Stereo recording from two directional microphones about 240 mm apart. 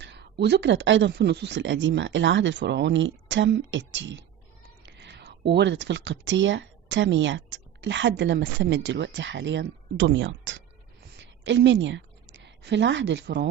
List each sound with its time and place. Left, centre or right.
0.0 s a woman's voice: right